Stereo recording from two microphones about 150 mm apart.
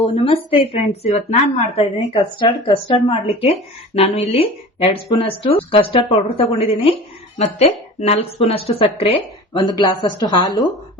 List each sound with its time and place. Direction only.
0.0 s speech: 35° left (ahead or behind)
2.4 s speech: 35° left (ahead or behind)